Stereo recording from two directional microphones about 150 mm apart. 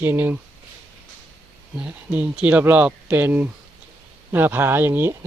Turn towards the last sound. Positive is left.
turn(degrees=-15)  # may be behind; listen again after turning